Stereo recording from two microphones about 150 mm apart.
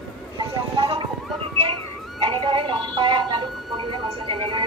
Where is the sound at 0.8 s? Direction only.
35° right (ahead or behind).